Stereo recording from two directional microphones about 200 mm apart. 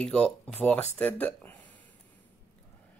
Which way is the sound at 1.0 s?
5° left (ahead or behind).